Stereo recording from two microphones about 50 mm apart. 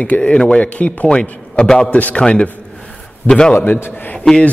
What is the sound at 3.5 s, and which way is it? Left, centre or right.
Speech, left.